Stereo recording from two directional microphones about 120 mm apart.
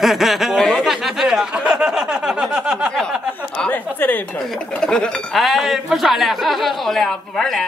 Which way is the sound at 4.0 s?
15° left (ahead or behind).